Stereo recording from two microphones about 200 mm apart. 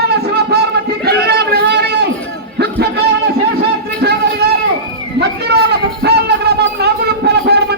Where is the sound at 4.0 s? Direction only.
55° right (ahead or behind).